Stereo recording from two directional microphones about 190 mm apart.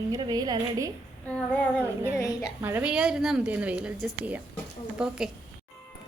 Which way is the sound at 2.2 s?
20° left (ahead or behind).